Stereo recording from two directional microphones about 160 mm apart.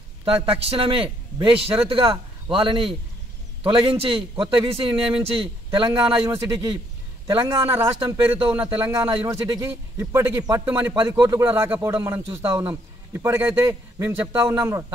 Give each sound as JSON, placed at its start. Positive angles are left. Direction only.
{"t": 0.2, "sound": "a man's voice", "side_deg": -35}
{"t": 7.3, "sound": "a man's voice", "side_deg": -15}